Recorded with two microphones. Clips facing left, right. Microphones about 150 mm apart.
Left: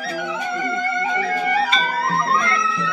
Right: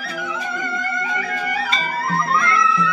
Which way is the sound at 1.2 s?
30° left (ahead or behind).